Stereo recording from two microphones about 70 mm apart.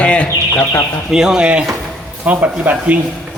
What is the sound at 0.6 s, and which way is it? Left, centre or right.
Speech, left.